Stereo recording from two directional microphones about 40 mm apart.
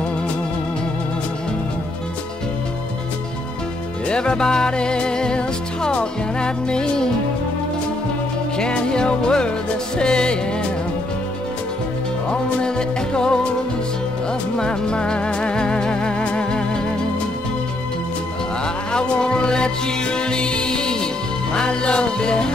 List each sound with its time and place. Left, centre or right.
4.1 s music: left
8.5 s music: left
12.3 s music: left
14.6 s music: left
18.9 s music: left